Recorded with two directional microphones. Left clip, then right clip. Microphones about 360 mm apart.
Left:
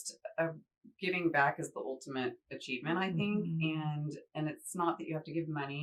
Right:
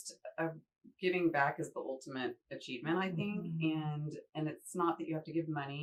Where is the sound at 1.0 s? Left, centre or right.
Centre.